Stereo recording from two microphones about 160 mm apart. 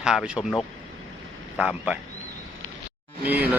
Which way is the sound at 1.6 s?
5° right (ahead or behind).